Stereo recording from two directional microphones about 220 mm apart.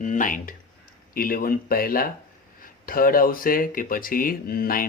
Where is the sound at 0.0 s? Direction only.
35° left (ahead or behind).